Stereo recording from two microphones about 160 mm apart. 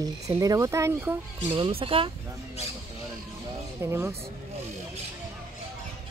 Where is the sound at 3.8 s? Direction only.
15° right (ahead or behind).